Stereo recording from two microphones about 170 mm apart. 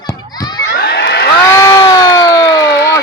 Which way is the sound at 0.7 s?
80° left.